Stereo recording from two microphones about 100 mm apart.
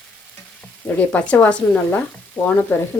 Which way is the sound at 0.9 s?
15° left (ahead or behind).